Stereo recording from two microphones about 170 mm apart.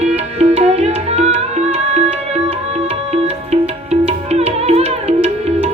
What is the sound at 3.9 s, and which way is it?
Music, 40° right (ahead or behind).